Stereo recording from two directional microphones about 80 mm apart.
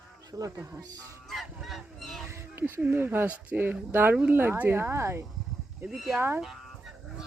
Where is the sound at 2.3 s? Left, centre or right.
Right.